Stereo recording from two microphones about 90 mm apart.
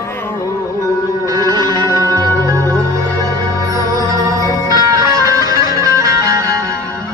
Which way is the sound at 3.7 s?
40° right (ahead or behind).